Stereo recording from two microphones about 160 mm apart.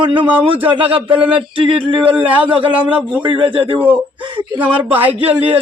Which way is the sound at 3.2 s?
30° right (ahead or behind).